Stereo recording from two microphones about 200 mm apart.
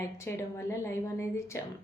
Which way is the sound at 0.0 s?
15° left (ahead or behind).